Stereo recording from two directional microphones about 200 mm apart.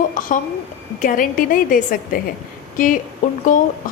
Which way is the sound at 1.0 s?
40° left (ahead or behind).